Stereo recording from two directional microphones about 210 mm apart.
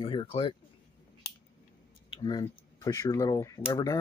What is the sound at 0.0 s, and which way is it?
Speech, 25° left (ahead or behind).